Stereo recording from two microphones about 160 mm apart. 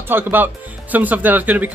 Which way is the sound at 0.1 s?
10° right (ahead or behind).